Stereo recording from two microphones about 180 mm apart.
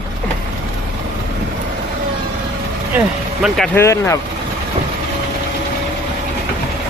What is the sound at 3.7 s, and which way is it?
Speech, 15° left (ahead or behind).